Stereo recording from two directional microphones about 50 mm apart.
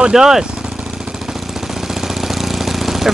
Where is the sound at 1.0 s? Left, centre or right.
Centre.